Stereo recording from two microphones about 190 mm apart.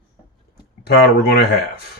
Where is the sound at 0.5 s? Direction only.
55° left (ahead or behind).